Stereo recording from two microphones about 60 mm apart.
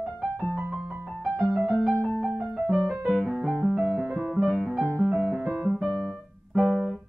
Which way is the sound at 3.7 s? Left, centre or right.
Centre.